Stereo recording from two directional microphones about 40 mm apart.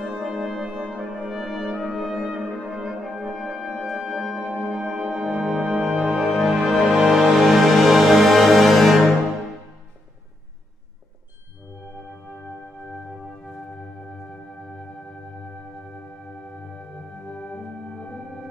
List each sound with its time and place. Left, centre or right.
0.0 s music: centre
1.3 s brass instrument: centre
2.2 s brass instrument: right
2.7 s french horn: centre
3.0 s brass instrument: centre
3.7 s music: centre
4.6 s music: centre
17.3 s music: left